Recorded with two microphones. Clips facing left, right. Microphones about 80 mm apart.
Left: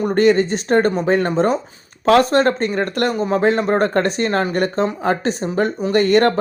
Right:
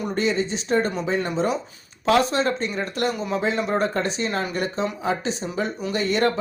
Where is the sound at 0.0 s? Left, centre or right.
Left.